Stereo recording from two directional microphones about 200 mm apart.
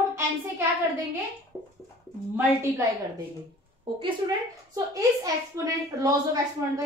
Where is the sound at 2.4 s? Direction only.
10° right (ahead or behind).